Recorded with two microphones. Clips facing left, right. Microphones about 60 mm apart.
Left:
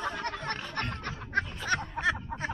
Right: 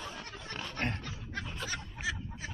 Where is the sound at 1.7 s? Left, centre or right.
Left.